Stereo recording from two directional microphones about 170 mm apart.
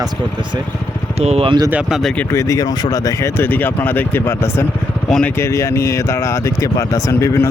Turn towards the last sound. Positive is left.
turn(degrees=15)  # may be behind; listen again after turning